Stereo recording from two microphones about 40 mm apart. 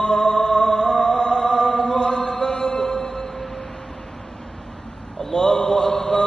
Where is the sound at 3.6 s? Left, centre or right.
Centre.